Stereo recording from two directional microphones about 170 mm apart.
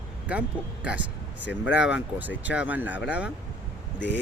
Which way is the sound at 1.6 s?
90° left.